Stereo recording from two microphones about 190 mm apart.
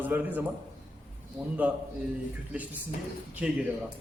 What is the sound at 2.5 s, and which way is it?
Speech, 10° right (ahead or behind).